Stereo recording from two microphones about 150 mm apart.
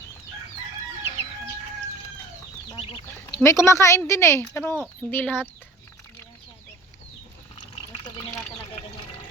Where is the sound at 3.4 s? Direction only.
20° left (ahead or behind).